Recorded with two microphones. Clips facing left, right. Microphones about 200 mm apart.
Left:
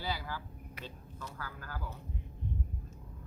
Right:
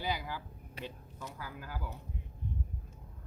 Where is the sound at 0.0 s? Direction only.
15° right (ahead or behind).